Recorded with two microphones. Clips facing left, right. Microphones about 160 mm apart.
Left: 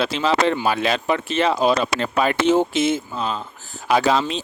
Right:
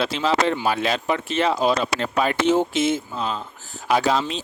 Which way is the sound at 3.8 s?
90° left.